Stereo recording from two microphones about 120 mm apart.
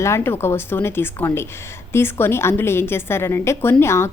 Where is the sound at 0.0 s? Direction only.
20° left (ahead or behind).